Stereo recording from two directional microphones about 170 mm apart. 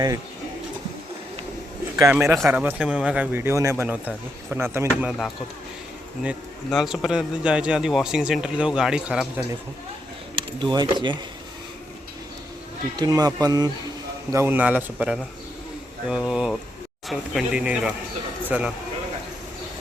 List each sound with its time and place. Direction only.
2.0 s speech: 15° right (ahead or behind)
5.0 s a man's voice: centre (ahead or behind)
6.7 s a man's voice: centre (ahead or behind)
10.3 s speech: 25° right (ahead or behind)
13.0 s a man's voice: 20° right (ahead or behind)